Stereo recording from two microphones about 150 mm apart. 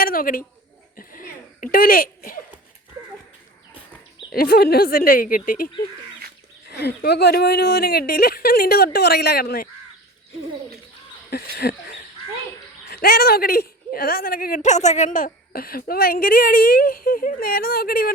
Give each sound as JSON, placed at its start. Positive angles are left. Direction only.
{"t": 0.0, "sound": "a sound", "side_deg": 75}
{"t": 4.3, "sound": "speech", "side_deg": 90}
{"t": 6.7, "sound": "speech", "side_deg": 90}
{"t": 11.6, "sound": "speech", "side_deg": 90}
{"t": 12.9, "sound": "a woman's voice", "side_deg": 90}